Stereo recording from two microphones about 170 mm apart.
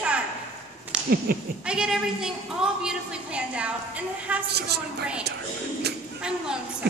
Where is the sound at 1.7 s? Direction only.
5° right (ahead or behind).